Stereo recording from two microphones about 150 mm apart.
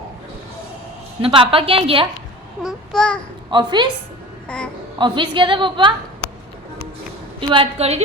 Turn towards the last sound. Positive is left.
turn(degrees=-45)  # may be behind; listen again after turning